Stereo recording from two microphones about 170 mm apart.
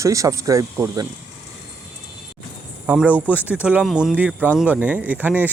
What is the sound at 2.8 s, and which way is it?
Speech, 10° right (ahead or behind).